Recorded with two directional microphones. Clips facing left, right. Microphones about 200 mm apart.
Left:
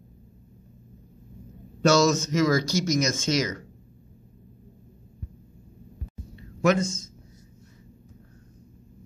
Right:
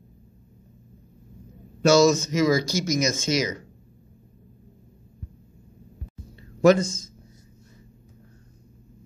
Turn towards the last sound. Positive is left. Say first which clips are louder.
# right 5 dB
turn(degrees=-35)  # may be behind; listen again after turning